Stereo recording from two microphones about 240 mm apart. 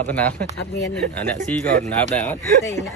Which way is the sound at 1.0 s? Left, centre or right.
Right.